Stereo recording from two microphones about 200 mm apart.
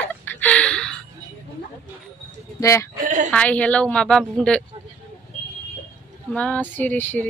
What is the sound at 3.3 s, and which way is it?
A woman's voice, 5° left (ahead or behind).